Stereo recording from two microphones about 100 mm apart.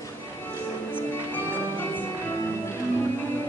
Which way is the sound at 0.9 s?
20° left (ahead or behind).